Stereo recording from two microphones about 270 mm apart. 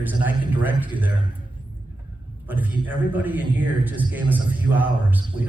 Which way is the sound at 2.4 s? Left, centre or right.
Centre.